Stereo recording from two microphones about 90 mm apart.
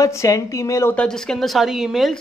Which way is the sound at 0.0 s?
35° left (ahead or behind).